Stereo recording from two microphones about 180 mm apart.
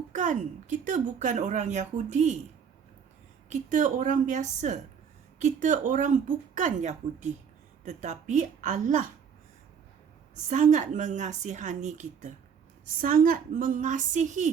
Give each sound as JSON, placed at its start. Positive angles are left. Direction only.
{"t": 0.1, "sound": "a woman's voice", "side_deg": -45}
{"t": 3.5, "sound": "a woman's voice", "side_deg": -45}
{"t": 10.5, "sound": "a woman's voice", "side_deg": -45}
{"t": 13.0, "sound": "a woman's voice", "side_deg": -50}